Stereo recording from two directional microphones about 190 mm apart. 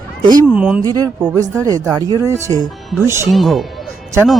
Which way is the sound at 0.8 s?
20° right (ahead or behind).